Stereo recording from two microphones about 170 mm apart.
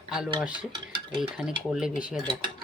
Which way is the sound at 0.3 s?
5° right (ahead or behind).